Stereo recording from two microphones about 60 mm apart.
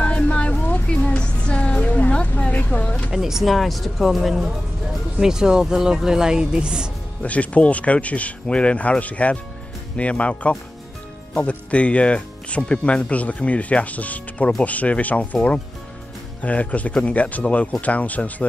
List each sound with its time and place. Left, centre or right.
0.0 s music: left
3.1 s speech: centre
7.2 s speech: left